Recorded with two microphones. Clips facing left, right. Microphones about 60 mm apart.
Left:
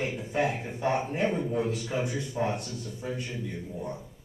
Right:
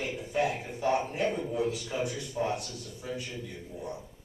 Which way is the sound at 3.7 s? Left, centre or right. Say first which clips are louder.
Even; centre.